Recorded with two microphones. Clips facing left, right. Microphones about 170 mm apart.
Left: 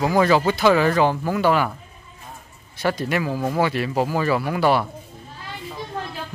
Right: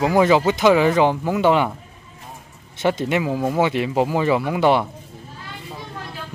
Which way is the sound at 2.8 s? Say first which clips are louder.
Right 3 dB; 20° right (ahead or behind).